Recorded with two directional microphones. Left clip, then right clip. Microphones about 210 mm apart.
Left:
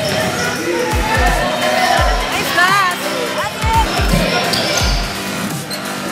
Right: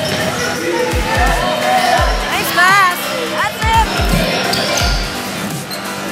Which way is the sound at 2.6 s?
20° right (ahead or behind).